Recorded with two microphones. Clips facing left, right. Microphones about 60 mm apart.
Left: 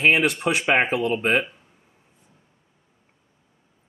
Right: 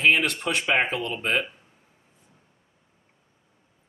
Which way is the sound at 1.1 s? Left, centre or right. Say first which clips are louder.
Left 5 dB; left.